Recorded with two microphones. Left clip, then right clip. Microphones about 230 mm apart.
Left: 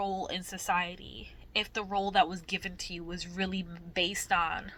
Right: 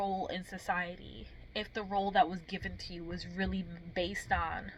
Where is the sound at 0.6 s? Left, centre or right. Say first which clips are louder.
Left 5 dB; centre.